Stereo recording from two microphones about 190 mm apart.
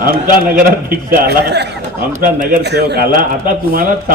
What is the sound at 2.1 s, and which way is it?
A man's voice, 45° right (ahead or behind).